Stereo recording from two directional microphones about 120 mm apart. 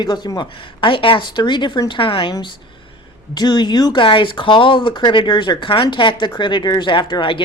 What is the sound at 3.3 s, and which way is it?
Speech, 35° left (ahead or behind).